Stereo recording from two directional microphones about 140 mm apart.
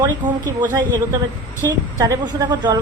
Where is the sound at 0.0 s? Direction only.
25° right (ahead or behind).